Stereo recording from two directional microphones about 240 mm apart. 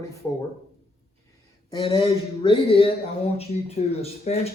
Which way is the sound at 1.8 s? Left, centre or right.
Centre.